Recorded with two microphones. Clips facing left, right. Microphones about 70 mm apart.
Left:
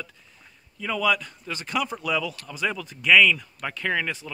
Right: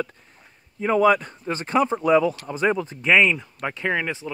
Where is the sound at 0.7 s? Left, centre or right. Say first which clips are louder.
Right 7 dB; right.